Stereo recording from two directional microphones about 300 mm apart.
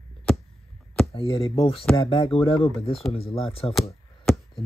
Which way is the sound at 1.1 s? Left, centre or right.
Centre.